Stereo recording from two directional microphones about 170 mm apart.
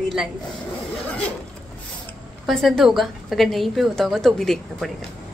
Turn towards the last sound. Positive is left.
turn(degrees=0)  # may be behind; listen again after turning